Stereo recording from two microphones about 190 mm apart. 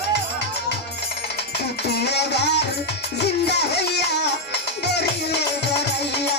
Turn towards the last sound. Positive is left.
turn(degrees=60)  # may be behind; listen again after turning